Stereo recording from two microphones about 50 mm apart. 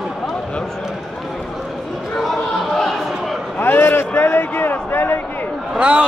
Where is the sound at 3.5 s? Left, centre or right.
Left.